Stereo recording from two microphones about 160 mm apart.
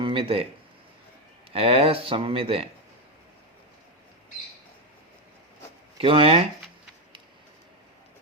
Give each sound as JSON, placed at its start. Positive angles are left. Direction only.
{"t": 0.0, "sound": "speech", "side_deg": -35}
{"t": 1.5, "sound": "speech", "side_deg": -35}
{"t": 6.0, "sound": "speech", "side_deg": -35}